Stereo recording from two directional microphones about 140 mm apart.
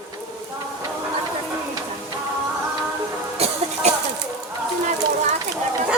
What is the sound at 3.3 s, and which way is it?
Music, 50° right (ahead or behind).